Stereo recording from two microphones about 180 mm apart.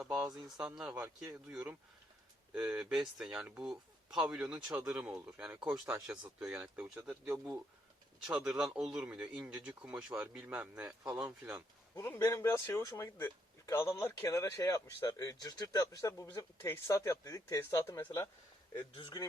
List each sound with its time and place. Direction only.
0.0 s speech: 5° right (ahead or behind)
11.9 s speech: 15° left (ahead or behind)
18.9 s speech: 25° left (ahead or behind)